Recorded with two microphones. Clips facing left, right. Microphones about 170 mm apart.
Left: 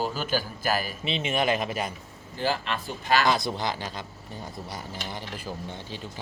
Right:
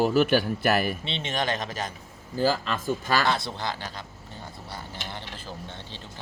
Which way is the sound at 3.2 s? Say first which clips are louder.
Left 2 dB; 15° left (ahead or behind).